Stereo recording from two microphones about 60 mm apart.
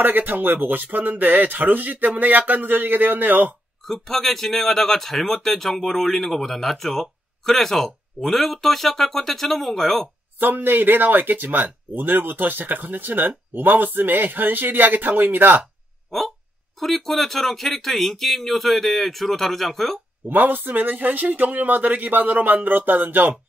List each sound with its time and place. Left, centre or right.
0.0 s a man's voice: right
3.8 s speech: centre
10.4 s a man's voice: right
16.8 s speech: centre
20.2 s speech: right